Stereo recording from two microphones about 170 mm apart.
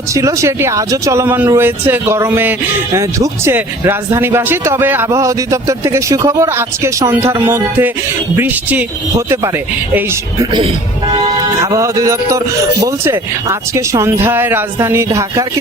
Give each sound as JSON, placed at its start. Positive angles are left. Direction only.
{"t": 0.1, "sound": "speech", "side_deg": -20}
{"t": 11.6, "sound": "speech", "side_deg": -20}